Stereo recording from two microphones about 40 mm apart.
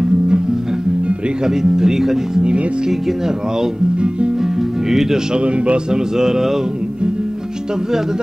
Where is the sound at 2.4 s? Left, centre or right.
Right.